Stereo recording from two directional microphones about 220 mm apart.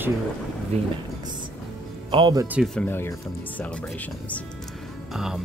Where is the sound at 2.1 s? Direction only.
20° right (ahead or behind).